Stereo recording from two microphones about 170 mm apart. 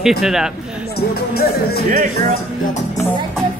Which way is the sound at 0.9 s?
65° left (ahead or behind).